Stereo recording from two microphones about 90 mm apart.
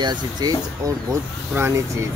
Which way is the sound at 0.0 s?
50° right (ahead or behind).